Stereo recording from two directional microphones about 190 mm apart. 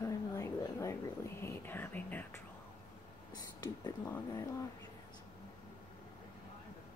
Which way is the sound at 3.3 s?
20° left (ahead or behind).